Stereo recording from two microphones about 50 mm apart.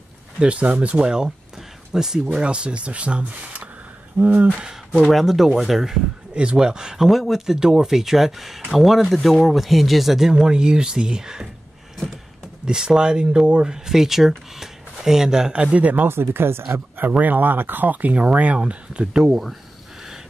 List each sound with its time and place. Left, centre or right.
0.4 s speech: right
5.1 s speech: centre
7.1 s speech: centre
10.3 s speech: centre
12.6 s speech: centre
16.1 s speech: right
17.2 s speech: right; by 19.2 s centre
19.2 s speech: centre